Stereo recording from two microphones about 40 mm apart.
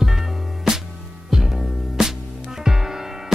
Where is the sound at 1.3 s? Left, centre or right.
Centre.